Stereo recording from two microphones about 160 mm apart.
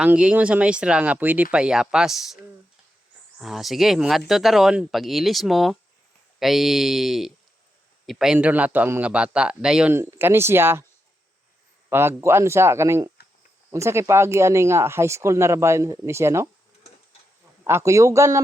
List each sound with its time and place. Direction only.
0.0 s speech: 5° right (ahead or behind)
9.9 s speech: 15° right (ahead or behind)
11.9 s speech: 15° right (ahead or behind)
17.6 s a man's voice: 15° right (ahead or behind)